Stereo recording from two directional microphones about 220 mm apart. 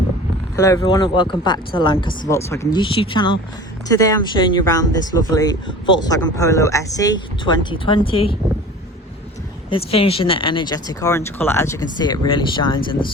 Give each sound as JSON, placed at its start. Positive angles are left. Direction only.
{"t": 0.5, "sound": "speech", "side_deg": 15}
{"t": 9.6, "sound": "speech", "side_deg": 25}